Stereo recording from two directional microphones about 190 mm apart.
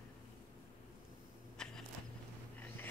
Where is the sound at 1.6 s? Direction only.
5° left (ahead or behind).